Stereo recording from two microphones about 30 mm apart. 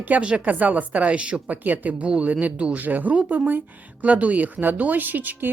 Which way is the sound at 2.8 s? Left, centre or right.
Right.